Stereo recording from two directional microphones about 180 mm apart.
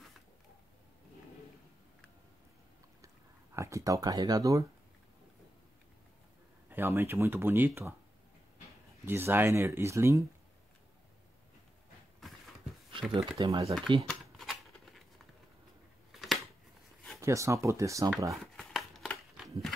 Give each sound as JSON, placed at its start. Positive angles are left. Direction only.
{"t": 3.5, "sound": "speech", "side_deg": -15}
{"t": 6.7, "sound": "speech", "side_deg": -10}
{"t": 9.0, "sound": "speech", "side_deg": -10}
{"t": 13.1, "sound": "speech", "side_deg": -25}
{"t": 14.0, "sound": "typewriter", "side_deg": 0}
{"t": 16.1, "sound": "a sound", "side_deg": 0}
{"t": 17.2, "sound": "speech", "side_deg": -15}
{"t": 18.3, "sound": "a sound", "side_deg": 0}